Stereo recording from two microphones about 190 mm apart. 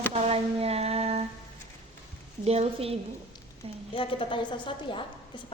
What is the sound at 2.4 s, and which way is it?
Speech, 30° right (ahead or behind).